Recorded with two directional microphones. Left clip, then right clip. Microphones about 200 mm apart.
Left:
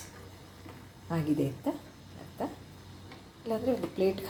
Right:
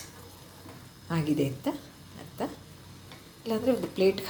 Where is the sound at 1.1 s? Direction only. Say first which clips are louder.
Right 2 dB; 15° right (ahead or behind).